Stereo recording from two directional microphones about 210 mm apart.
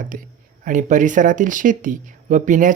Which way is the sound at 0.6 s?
35° right (ahead or behind).